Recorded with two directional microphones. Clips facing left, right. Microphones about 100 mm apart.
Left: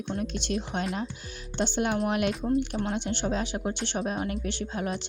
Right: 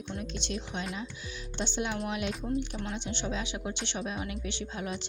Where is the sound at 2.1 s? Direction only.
60° left (ahead or behind).